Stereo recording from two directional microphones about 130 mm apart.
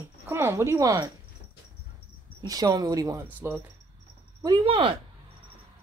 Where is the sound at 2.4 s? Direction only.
30° right (ahead or behind).